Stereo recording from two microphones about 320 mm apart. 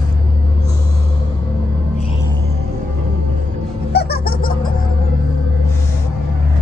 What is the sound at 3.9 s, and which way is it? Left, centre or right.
Baby laughter, left.